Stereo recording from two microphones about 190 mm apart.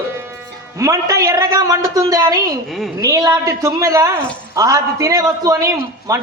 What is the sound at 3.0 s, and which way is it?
A man's voice, 15° right (ahead or behind).